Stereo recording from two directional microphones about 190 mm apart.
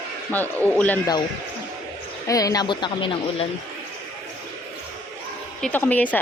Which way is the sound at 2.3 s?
20° left (ahead or behind).